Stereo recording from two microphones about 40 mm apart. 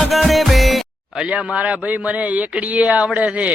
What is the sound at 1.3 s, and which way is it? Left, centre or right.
A man's voice, right.